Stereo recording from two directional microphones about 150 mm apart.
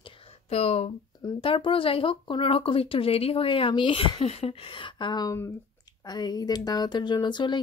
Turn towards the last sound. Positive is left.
turn(degrees=30)  # may be behind; listen again after turning